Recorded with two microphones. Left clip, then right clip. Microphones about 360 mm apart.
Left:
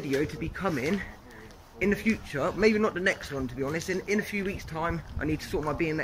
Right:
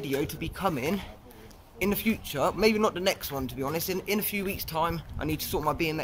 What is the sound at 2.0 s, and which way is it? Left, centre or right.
Speech, right.